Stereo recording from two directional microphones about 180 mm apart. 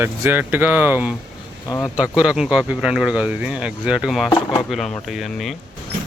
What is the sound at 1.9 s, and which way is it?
Speech, 5° right (ahead or behind).